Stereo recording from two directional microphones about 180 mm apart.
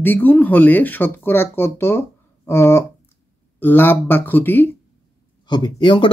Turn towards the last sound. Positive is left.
turn(degrees=25)  # may be behind; listen again after turning